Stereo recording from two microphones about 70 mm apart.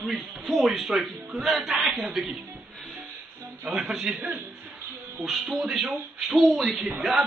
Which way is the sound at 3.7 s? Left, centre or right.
Centre.